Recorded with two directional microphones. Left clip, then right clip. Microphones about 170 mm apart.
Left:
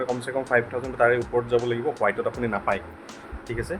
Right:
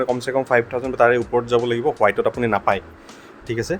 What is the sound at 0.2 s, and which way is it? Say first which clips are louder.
Speech: right 5 dB; 60° right (ahead or behind).